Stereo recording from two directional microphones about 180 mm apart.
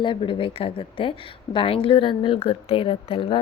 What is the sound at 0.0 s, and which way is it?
A woman's voice, 30° left (ahead or behind).